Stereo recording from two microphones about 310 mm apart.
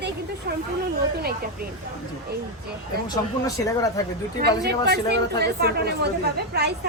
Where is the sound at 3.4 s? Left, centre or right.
Centre.